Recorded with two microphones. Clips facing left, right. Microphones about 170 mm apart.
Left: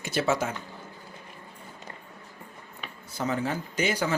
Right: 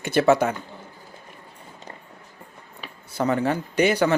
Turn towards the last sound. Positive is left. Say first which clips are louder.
# right 7 dB
turn(degrees=-65)  # may be behind; listen again after turning